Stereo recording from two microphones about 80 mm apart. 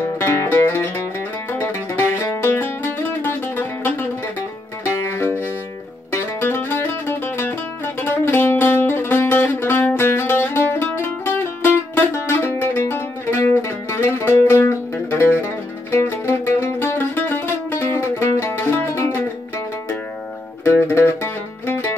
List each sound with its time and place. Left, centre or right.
0.2 s music: left
2.5 s music: left
5.0 s music: left
20.6 s music: left